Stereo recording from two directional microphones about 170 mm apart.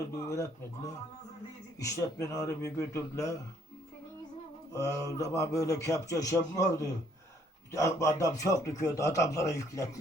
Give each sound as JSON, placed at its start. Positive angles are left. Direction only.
{"t": 0.2, "sound": "speech", "side_deg": 15}
{"t": 1.8, "sound": "a man's voice", "side_deg": 20}
{"t": 4.7, "sound": "a man's voice", "side_deg": 15}